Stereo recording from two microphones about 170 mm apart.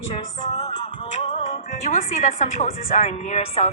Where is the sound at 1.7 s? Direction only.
45° left (ahead or behind).